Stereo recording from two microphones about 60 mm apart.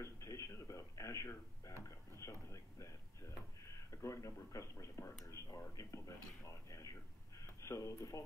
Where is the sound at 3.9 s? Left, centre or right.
Left.